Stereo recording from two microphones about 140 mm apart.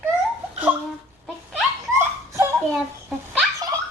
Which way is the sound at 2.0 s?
20° right (ahead or behind).